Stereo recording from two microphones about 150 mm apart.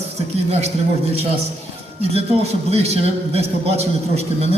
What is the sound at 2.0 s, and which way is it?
A man's voice, 40° right (ahead or behind).